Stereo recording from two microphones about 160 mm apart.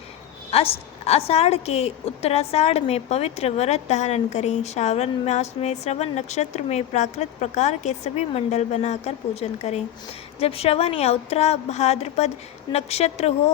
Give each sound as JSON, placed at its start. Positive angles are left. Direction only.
{"t": 0.5, "sound": "a woman's voice", "side_deg": 40}